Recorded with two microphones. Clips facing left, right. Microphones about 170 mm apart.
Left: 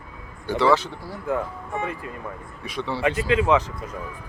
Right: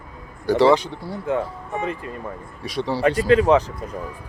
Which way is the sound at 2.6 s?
35° right (ahead or behind).